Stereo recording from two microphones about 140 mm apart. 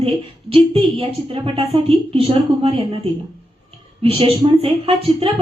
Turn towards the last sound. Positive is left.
turn(degrees=-40)  # may be behind; listen again after turning